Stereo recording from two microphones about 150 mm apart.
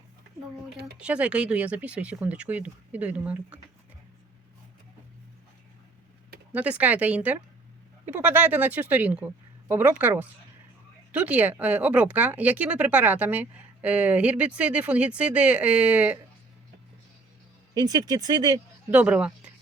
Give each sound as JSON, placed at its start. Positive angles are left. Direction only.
{"t": 0.9, "sound": "speech", "side_deg": -10}
{"t": 6.5, "sound": "speech", "side_deg": -10}
{"t": 17.7, "sound": "speech", "side_deg": -25}
{"t": 18.9, "sound": "speech", "side_deg": -10}